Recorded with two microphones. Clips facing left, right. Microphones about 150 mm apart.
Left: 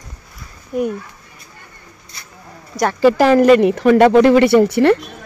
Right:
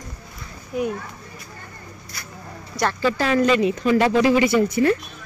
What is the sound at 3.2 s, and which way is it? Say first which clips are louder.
Speech: left 8 dB; 65° left (ahead or behind).